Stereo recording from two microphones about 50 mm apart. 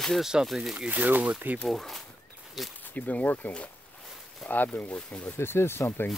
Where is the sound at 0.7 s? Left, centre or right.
Right.